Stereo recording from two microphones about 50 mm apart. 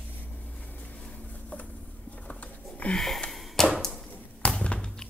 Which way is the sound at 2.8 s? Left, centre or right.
Left.